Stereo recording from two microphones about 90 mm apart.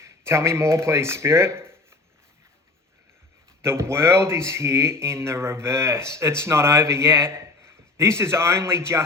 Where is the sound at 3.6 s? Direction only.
30° right (ahead or behind).